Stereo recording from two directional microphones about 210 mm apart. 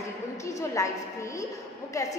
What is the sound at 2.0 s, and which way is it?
Speech, 15° left (ahead or behind).